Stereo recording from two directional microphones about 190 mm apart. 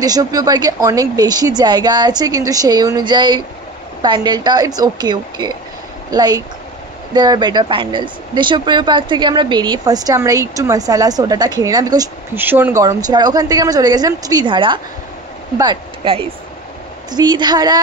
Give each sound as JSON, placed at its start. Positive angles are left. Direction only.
{"t": 0.0, "sound": "speech", "side_deg": -20}